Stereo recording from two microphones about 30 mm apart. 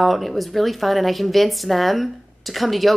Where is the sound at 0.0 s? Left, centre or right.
Centre.